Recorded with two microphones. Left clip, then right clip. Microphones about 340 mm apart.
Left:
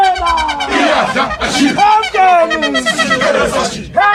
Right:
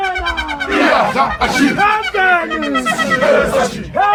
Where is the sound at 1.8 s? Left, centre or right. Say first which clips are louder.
Left 7 dB; centre.